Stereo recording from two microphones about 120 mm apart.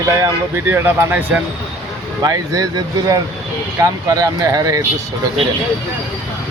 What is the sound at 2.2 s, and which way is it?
Speech, 30° right (ahead or behind).